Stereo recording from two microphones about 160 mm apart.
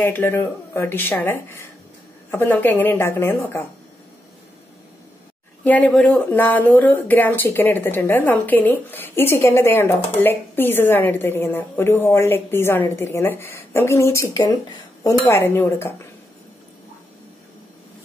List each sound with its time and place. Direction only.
0.0 s speech: 15° left (ahead or behind)
5.6 s speech: 10° left (ahead or behind)